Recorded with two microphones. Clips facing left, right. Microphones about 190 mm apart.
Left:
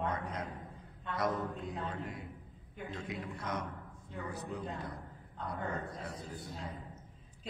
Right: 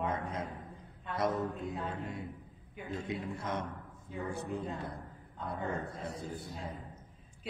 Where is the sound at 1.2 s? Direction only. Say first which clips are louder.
Right 2 dB; 25° right (ahead or behind).